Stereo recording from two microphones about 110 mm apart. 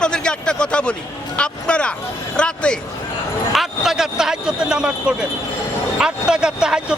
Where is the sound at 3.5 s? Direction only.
5° right (ahead or behind).